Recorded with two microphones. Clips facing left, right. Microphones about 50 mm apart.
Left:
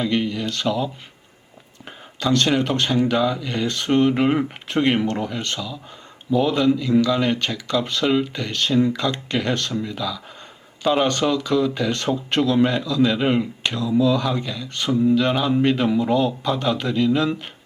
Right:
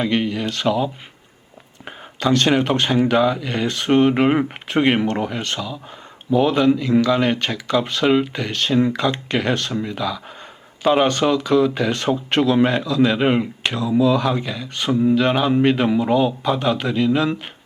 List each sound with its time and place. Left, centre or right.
0.0 s speech: right
2.2 s speech: right